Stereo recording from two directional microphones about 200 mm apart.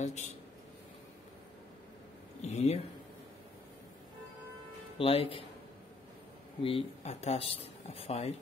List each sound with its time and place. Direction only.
0.0 s speech: 35° left (ahead or behind)
2.4 s speech: 30° left (ahead or behind)
4.9 s speech: 30° left (ahead or behind)
6.6 s speech: 30° left (ahead or behind)